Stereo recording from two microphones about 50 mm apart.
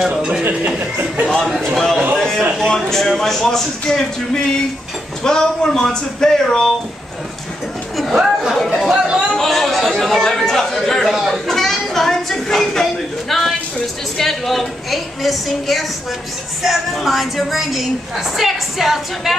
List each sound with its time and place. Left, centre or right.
0.7 s speech: right
1.2 s speech: centre
2.1 s a sound: centre
2.5 s speech: centre
8.1 s speech: centre
8.8 s chatter: centre
9.3 s chatter: centre
13.3 s a sound: centre
14.1 s a woman's voice: centre